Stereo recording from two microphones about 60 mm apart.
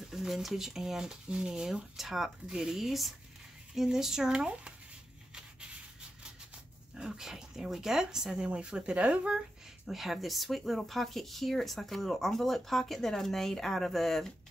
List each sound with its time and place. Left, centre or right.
0.1 s speech: centre
7.0 s speech: centre
9.8 s speech: centre